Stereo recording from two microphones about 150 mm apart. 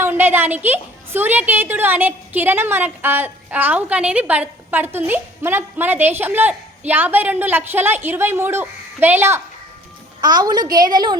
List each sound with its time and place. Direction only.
0.0 s a woman's voice: 15° right (ahead or behind)
10.2 s a woman's voice: 30° right (ahead or behind)